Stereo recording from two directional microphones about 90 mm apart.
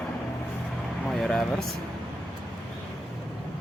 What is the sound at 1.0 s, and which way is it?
Speech, centre (ahead or behind).